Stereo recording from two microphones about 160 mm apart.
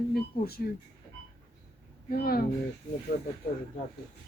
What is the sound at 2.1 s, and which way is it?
Speech, 70° left (ahead or behind).